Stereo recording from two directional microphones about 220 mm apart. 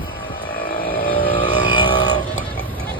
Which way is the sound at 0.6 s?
40° left (ahead or behind).